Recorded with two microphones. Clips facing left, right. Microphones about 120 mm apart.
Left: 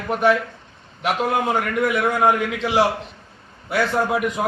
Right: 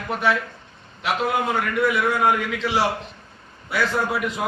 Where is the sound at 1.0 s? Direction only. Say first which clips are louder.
Left 2 dB; 50° left (ahead or behind).